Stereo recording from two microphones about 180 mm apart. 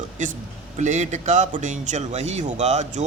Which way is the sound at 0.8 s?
40° right (ahead or behind).